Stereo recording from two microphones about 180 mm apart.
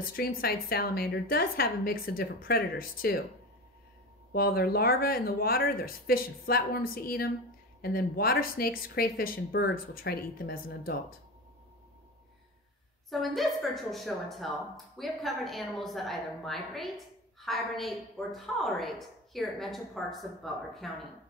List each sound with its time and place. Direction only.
0.0 s speech: 55° left (ahead or behind)
4.3 s speech: 55° left (ahead or behind)
13.1 s a woman's voice: centre (ahead or behind)